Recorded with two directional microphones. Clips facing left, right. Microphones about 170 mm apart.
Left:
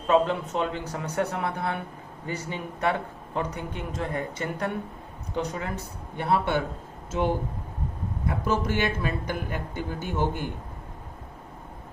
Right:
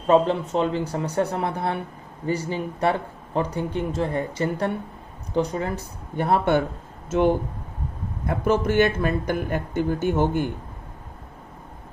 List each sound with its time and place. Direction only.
0.1 s speech: 35° right (ahead or behind); by 6.6 s 50° right (ahead or behind)
8.4 s speech: 55° right (ahead or behind)